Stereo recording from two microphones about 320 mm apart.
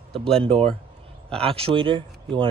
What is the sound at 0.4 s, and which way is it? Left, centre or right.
Speech, centre.